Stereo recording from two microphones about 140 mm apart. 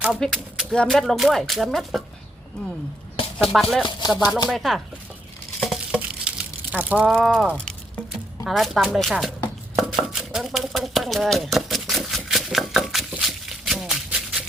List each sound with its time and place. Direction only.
0.0 s speech: centre (ahead or behind)
3.5 s speech: centre (ahead or behind)
3.8 s speech: 30° left (ahead or behind)
4.4 s speech: centre (ahead or behind)
5.5 s a sound: centre (ahead or behind)
7.1 s speech: centre (ahead or behind)
7.5 s a sound: 5° left (ahead or behind)
8.4 s speech: centre (ahead or behind)
9.4 s a sound: centre (ahead or behind)